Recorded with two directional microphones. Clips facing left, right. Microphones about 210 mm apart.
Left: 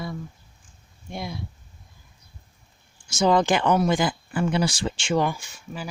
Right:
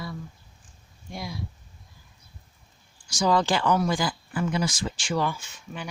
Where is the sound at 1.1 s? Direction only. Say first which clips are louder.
Left 3 dB; 25° left (ahead or behind).